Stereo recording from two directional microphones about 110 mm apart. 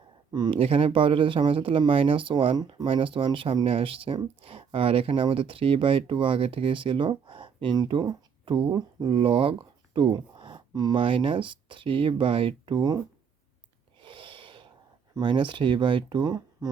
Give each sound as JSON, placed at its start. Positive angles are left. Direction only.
{"t": 0.3, "sound": "speech", "side_deg": -40}
{"t": 0.6, "sound": "speech", "side_deg": -60}
{"t": 2.6, "sound": "speech", "side_deg": -40}
{"t": 2.8, "sound": "speech", "side_deg": -55}
{"t": 11.0, "sound": "speech", "side_deg": -55}
{"t": 14.0, "sound": "a sound", "side_deg": -50}
{"t": 15.1, "sound": "speech", "side_deg": -45}